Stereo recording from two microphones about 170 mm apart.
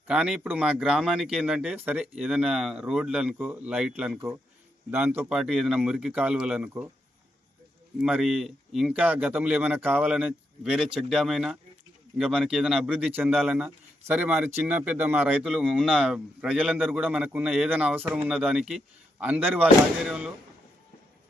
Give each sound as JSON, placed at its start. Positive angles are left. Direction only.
{"t": 0.1, "sound": "speech", "side_deg": -5}
{"t": 7.9, "sound": "speech", "side_deg": -5}